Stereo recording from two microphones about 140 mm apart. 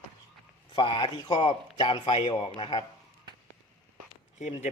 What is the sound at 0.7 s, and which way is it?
A man's voice, 35° left (ahead or behind).